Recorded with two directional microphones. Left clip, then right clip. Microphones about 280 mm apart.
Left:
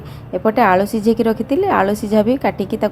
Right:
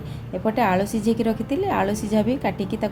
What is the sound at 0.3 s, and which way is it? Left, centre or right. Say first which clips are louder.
A woman's voice: left 8 dB; centre.